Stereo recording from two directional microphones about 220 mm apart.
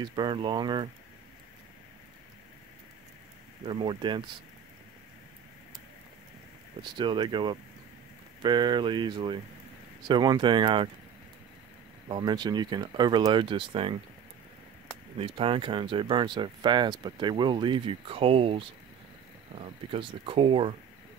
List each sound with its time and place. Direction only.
0.0 s speech: 20° right (ahead or behind)
3.6 s speech: 20° right (ahead or behind)
6.8 s speech: 20° right (ahead or behind)
12.1 s speech: 20° right (ahead or behind)
15.1 s speech: 25° right (ahead or behind)